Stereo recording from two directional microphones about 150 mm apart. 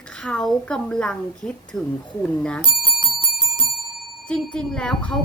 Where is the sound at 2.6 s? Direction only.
30° right (ahead or behind).